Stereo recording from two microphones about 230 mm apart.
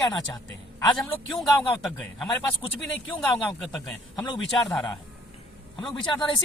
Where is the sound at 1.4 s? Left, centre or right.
Centre.